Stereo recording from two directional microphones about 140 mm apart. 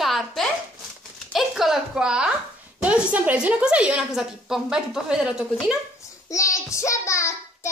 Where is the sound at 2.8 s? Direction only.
10° right (ahead or behind).